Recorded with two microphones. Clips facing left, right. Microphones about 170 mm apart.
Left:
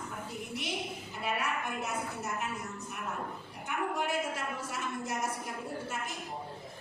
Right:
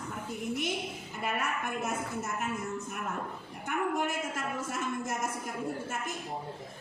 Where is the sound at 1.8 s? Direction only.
50° right (ahead or behind).